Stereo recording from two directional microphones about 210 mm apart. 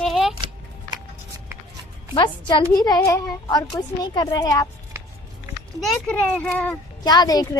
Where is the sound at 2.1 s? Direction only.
20° left (ahead or behind).